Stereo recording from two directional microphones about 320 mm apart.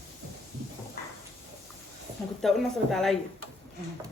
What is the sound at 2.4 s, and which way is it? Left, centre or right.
Speech, centre.